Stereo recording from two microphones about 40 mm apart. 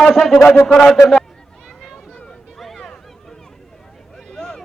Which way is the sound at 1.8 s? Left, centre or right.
Centre.